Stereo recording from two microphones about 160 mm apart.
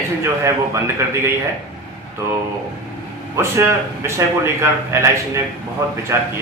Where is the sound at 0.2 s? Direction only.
15° right (ahead or behind).